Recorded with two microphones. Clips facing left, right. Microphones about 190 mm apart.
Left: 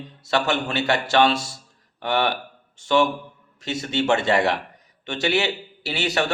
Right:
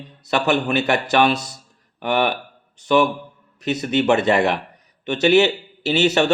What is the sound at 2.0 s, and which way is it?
Speech, 15° right (ahead or behind).